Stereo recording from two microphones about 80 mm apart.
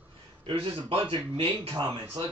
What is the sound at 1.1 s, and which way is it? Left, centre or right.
Speech, right.